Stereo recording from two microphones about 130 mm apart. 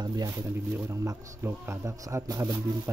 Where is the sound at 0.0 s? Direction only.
30° right (ahead or behind).